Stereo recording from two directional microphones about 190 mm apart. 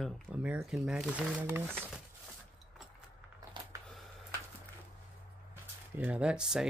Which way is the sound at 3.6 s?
25° right (ahead or behind).